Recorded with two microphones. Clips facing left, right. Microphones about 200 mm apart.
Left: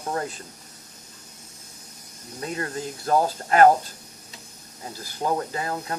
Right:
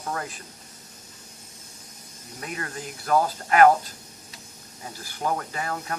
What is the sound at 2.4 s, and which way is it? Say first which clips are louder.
Speech: left 5 dB; 30° left (ahead or behind).